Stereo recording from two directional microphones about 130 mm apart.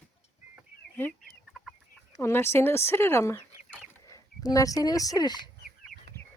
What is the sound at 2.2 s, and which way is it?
Speech, 20° left (ahead or behind).